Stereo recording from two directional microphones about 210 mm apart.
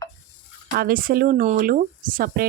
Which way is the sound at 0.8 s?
45° right (ahead or behind).